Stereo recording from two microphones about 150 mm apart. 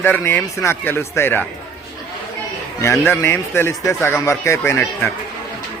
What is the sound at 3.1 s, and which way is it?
A man's voice, 15° left (ahead or behind).